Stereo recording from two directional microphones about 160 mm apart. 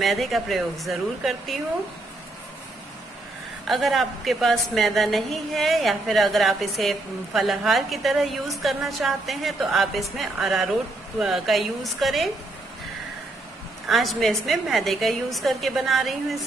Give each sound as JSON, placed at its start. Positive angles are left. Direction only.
{"t": 0.0, "sound": "a woman's voice", "side_deg": 0}
{"t": 3.6, "sound": "a woman's voice", "side_deg": 0}
{"t": 13.8, "sound": "a woman's voice", "side_deg": 0}